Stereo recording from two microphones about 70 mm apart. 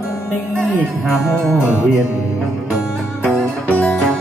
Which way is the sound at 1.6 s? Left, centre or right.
Left.